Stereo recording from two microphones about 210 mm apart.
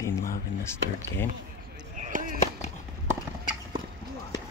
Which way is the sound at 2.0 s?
40° right (ahead or behind).